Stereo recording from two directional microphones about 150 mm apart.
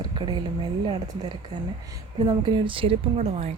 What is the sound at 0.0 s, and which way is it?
Speech, 30° right (ahead or behind).